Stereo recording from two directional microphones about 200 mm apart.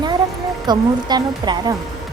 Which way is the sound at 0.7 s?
20° right (ahead or behind).